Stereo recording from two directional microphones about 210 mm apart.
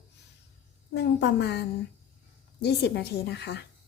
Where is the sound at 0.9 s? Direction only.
55° left (ahead or behind).